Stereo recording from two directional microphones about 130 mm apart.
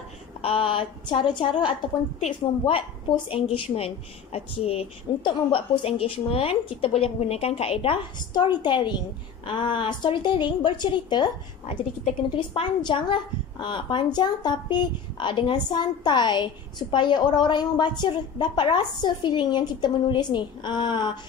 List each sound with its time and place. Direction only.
0.4 s a woman's voice: 45° left (ahead or behind)
3.3 s a woman's voice: 45° left (ahead or behind)
8.3 s a woman's voice: 35° left (ahead or behind)
12.4 s a woman's voice: 40° left (ahead or behind)